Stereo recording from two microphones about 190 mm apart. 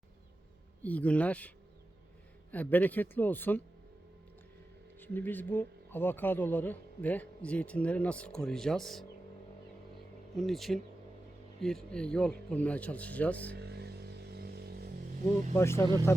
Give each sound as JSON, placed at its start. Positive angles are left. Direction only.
{"t": 0.8, "sound": "speech", "side_deg": 10}
{"t": 4.9, "sound": "speech", "side_deg": 10}
{"t": 10.3, "sound": "speech", "side_deg": 0}
{"t": 13.6, "sound": "vehicle", "side_deg": -60}
{"t": 15.5, "sound": "speech", "side_deg": 15}